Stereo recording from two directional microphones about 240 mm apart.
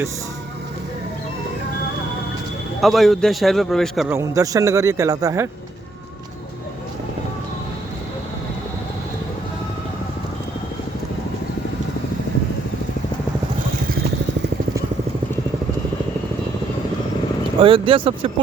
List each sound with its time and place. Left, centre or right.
2.8 s a man's voice: centre
4.2 s a man's voice: centre
17.6 s speech: right